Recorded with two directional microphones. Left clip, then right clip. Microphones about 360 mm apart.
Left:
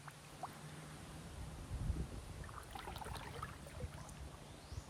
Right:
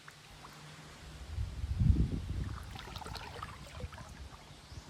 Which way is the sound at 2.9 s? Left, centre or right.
Centre.